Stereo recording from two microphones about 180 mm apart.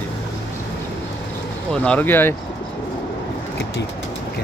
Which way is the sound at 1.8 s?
10° left (ahead or behind).